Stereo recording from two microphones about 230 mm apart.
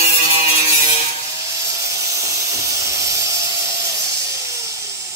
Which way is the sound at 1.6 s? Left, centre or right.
Centre.